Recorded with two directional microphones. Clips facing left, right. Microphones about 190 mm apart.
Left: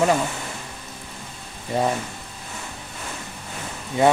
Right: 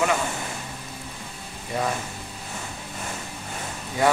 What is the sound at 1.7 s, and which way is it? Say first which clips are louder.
Speech: left 4 dB; 30° left (ahead or behind).